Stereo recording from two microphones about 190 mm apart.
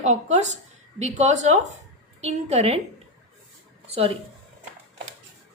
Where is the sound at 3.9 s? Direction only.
30° right (ahead or behind).